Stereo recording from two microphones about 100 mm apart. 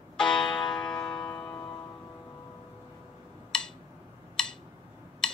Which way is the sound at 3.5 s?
5° left (ahead or behind).